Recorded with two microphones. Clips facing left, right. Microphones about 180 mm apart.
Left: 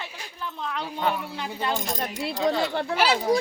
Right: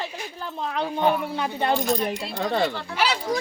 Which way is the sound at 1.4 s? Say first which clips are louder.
Right 3 dB; 55° right (ahead or behind).